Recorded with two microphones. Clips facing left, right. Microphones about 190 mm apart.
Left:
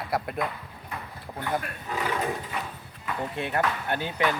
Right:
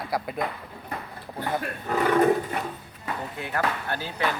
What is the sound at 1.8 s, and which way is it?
Speech, 50° right (ahead or behind).